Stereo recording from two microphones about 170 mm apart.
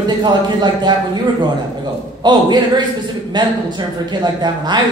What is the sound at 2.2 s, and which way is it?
A woman's voice, 25° right (ahead or behind).